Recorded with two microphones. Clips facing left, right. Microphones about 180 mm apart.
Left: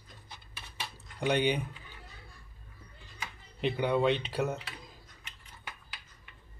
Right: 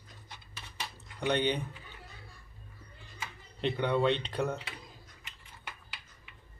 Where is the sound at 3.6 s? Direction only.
5° left (ahead or behind).